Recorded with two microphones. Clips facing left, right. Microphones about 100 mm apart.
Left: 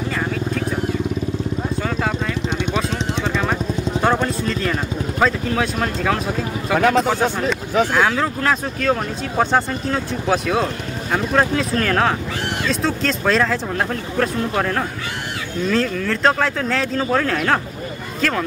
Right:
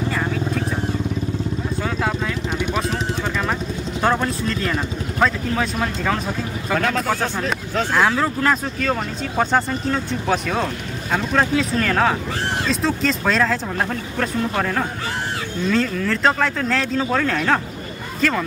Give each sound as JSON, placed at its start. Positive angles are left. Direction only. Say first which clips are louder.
{"t": 0.1, "sound": "vehicle", "louder": "even", "side_deg": 0}
{"t": 1.8, "sound": "vehicle", "louder": "right 1 dB", "side_deg": 0}
{"t": 4.0, "sound": "speech", "louder": "even", "side_deg": 0}
{"t": 6.7, "sound": "speech", "louder": "left 5 dB", "side_deg": 10}
{"t": 7.9, "sound": "speech", "louder": "even", "side_deg": 0}